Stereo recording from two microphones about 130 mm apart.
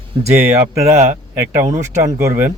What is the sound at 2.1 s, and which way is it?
Speech, 20° right (ahead or behind).